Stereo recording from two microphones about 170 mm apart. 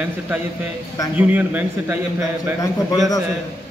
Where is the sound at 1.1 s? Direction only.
10° right (ahead or behind).